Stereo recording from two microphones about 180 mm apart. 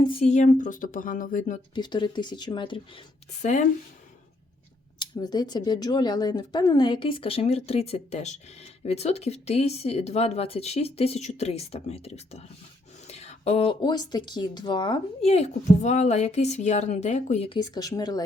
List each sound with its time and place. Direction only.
0.0 s speech: 30° left (ahead or behind); by 1.5 s 45° left (ahead or behind)
1.7 s speech: 25° left (ahead or behind)
3.4 s speech: 40° left (ahead or behind)
4.9 s speech: 20° left (ahead or behind)
17.6 s speech: 20° left (ahead or behind)